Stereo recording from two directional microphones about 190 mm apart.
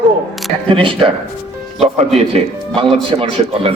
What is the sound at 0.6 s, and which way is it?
Speech, 30° right (ahead or behind).